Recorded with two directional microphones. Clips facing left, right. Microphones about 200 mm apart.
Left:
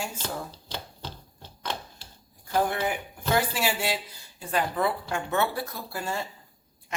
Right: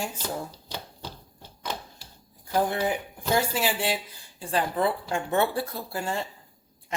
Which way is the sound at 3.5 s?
15° right (ahead or behind).